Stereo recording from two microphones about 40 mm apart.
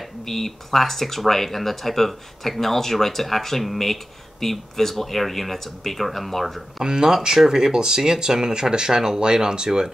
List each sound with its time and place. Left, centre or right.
0.2 s speech: centre
6.8 s speech: centre